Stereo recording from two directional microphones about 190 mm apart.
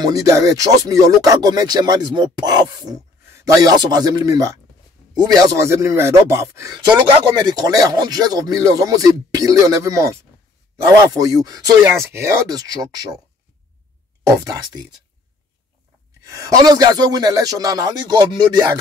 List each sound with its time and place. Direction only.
0.0 s speech: 20° right (ahead or behind)
11.1 s speech: 20° right (ahead or behind)
14.2 s speech: 20° right (ahead or behind)
16.3 s speech: 20° right (ahead or behind)